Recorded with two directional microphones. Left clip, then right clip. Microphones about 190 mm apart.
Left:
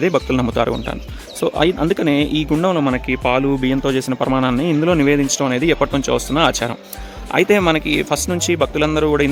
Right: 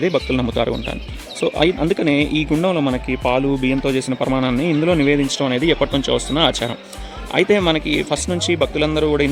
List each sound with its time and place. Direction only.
0.0 s speech: 10° left (ahead or behind)